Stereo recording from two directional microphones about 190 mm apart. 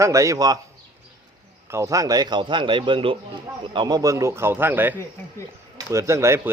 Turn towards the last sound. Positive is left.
turn(degrees=-15)  # may be behind; listen again after turning